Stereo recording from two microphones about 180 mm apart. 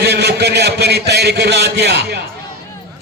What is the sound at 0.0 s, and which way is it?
A man's voice, 65° right (ahead or behind).